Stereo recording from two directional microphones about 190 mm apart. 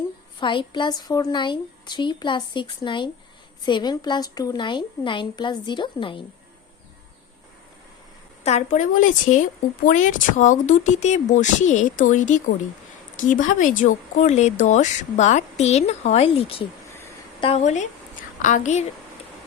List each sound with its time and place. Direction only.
0.3 s a woman's voice: 25° left (ahead or behind)
8.4 s a woman's voice: 40° left (ahead or behind)